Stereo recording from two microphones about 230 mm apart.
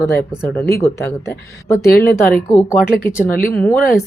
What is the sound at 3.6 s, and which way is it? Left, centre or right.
Speech, centre.